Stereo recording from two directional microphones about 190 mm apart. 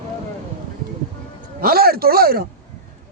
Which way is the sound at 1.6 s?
55° right (ahead or behind).